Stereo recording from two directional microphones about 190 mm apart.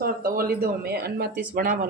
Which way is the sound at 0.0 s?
50° right (ahead or behind).